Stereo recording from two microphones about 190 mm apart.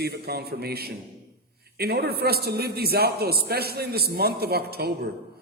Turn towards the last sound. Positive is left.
turn(degrees=-55)  # may be behind; listen again after turning